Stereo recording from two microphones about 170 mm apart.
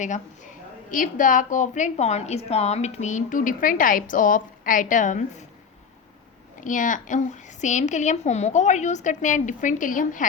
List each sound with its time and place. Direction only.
0.0 s a woman's voice: 45° left (ahead or behind)
6.6 s a woman's voice: 50° left (ahead or behind)